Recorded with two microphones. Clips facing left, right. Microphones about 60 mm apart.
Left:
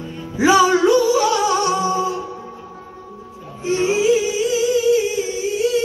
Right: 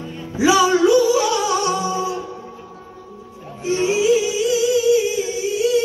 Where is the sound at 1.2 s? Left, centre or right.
Centre.